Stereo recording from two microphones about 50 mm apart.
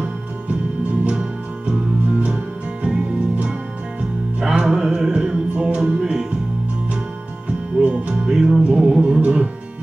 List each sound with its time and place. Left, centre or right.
1.7 s music: right
5.9 s music: centre
7.4 s music: right